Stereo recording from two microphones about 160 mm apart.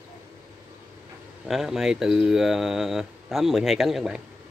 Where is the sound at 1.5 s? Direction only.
5° right (ahead or behind).